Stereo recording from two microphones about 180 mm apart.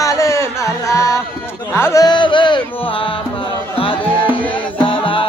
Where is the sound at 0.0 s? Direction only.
15° left (ahead or behind).